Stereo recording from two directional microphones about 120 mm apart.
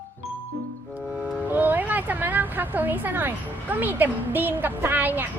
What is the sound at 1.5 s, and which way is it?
Speech, 15° right (ahead or behind).